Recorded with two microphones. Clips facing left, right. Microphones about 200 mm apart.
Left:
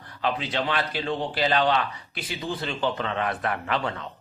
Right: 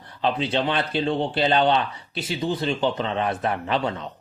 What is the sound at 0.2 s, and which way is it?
Speech, 25° right (ahead or behind).